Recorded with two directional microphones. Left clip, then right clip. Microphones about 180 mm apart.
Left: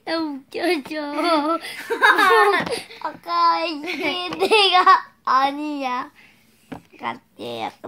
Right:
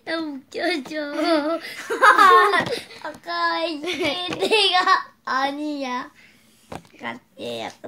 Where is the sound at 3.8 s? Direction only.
20° right (ahead or behind).